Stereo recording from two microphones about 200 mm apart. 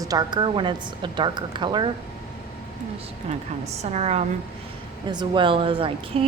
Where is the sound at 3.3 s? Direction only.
35° right (ahead or behind).